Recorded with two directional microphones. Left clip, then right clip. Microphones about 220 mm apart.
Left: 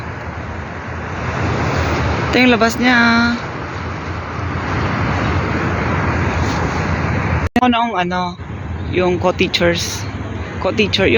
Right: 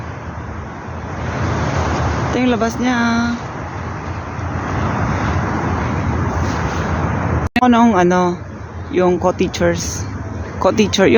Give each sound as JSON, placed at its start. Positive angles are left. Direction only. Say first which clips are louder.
{"t": 2.3, "sound": "speech", "louder": "left 6 dB", "side_deg": 0}
{"t": 7.6, "sound": "speech", "louder": "right 4 dB", "side_deg": -10}
{"t": 10.6, "sound": "speech", "louder": "right 2 dB", "side_deg": -25}